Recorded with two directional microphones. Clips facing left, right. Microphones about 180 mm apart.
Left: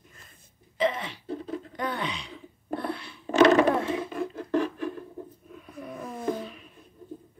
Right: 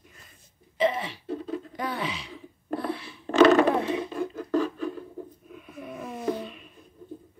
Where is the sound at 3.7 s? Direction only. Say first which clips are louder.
Right 1 dB; 20° right (ahead or behind).